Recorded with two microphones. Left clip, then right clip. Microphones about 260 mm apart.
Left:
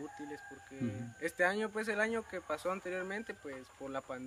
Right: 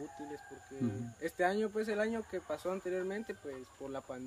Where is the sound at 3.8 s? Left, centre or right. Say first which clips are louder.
Even; centre.